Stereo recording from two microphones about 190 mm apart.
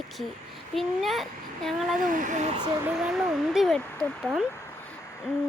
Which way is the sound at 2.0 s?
45° right (ahead or behind).